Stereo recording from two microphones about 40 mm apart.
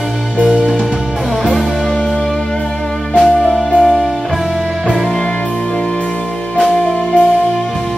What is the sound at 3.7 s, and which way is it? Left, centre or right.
Music, right.